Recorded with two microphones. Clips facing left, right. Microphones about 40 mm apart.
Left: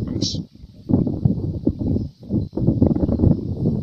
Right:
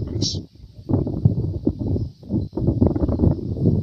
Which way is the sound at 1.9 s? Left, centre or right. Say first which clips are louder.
Left 2 dB; left.